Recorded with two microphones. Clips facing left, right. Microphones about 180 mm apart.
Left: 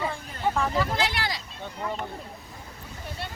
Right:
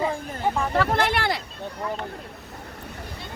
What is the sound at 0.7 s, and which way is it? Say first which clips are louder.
Speech: right 4 dB; 60° right (ahead or behind).